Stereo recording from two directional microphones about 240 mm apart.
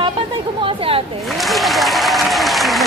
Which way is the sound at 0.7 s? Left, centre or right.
Right.